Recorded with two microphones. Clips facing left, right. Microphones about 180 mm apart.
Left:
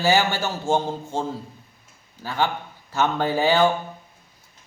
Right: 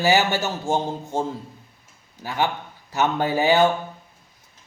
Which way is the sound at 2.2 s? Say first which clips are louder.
Even; 15° right (ahead or behind).